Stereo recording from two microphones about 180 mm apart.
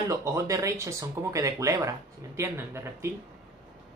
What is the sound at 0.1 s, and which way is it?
Speech, 20° right (ahead or behind).